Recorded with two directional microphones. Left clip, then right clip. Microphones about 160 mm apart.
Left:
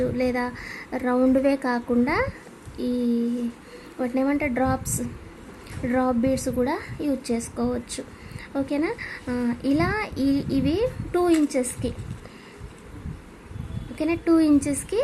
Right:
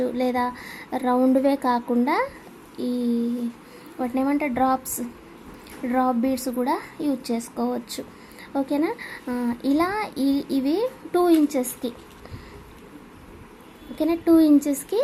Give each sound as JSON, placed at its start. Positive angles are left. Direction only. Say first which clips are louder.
{"t": 0.0, "sound": "a woman's voice", "louder": "right 1 dB", "side_deg": 0}
{"t": 1.5, "sound": "a woman's voice", "louder": "right 2 dB", "side_deg": 0}
{"t": 5.8, "sound": "a woman's voice", "louder": "right 1 dB", "side_deg": 0}
{"t": 14.0, "sound": "a woman's voice", "louder": "right 3 dB", "side_deg": -5}